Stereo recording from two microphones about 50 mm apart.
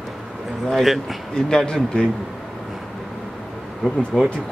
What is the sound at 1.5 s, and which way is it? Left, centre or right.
Speech, centre.